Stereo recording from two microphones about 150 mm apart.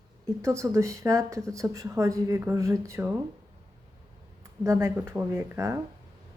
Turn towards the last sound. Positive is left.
turn(degrees=-15)  # may be behind; listen again after turning